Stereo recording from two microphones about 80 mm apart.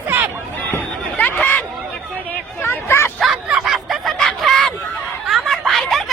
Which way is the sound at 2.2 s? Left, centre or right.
Left.